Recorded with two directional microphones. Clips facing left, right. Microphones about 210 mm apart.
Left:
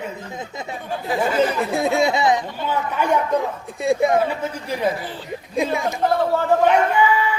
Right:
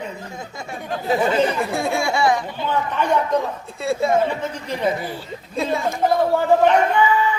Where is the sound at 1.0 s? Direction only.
25° right (ahead or behind).